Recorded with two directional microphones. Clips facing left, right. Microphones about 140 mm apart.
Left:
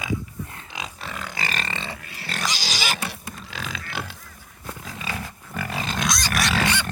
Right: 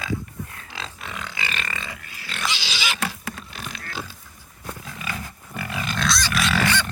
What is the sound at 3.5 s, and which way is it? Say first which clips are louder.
Pig: left 2 dB; 65° left (ahead or behind).